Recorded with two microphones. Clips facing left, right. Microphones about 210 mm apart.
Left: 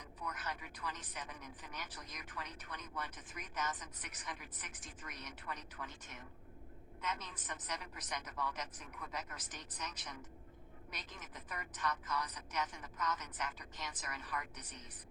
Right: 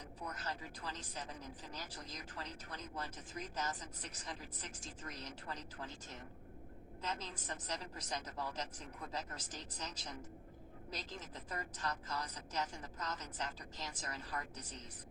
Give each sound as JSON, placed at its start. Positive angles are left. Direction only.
{"t": 0.2, "sound": "speech", "side_deg": -30}